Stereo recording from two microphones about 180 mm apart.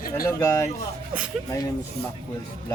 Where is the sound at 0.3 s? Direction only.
15° left (ahead or behind).